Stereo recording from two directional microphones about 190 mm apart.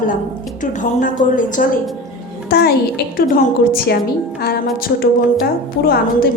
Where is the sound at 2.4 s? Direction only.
55° left (ahead or behind).